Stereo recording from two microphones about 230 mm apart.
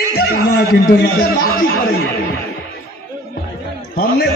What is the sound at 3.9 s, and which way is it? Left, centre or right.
Speech, left.